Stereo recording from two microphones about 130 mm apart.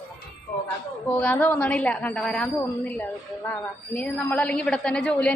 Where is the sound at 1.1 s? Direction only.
10° left (ahead or behind).